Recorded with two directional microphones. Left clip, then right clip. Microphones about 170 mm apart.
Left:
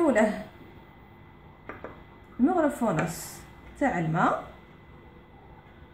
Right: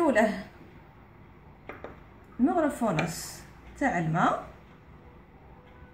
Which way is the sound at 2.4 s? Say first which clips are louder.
Left 1 dB; 10° right (ahead or behind).